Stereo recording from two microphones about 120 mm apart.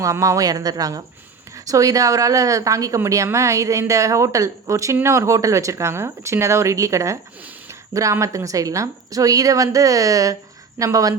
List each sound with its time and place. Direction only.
0.0 s speech: 25° right (ahead or behind)